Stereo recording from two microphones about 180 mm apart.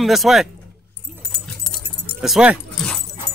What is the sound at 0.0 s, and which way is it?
Speech, centre (ahead or behind).